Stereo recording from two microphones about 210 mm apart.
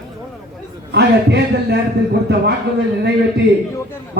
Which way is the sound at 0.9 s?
55° right (ahead or behind).